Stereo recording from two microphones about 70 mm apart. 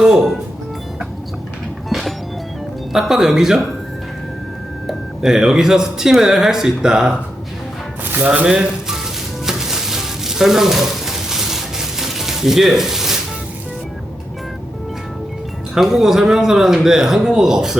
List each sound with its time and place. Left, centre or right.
0.0 s speech: centre
1.9 s music: centre
2.9 s speech: centre
4.9 s speech: centre
8.1 s speech: right
8.4 s speech: centre
9.5 s a sound: centre
15.7 s speech: centre